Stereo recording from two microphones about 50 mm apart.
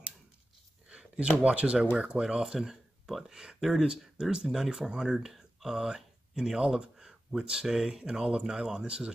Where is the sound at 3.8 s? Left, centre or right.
Centre.